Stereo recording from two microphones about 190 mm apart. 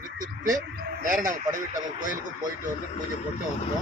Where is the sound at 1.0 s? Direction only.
45° right (ahead or behind).